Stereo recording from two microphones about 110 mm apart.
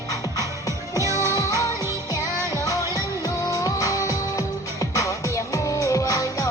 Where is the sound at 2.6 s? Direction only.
30° left (ahead or behind).